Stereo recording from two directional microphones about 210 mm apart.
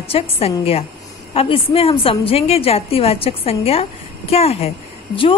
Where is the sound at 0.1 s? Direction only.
30° left (ahead or behind).